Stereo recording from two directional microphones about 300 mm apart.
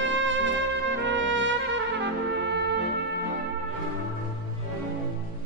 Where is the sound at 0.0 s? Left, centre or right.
Right.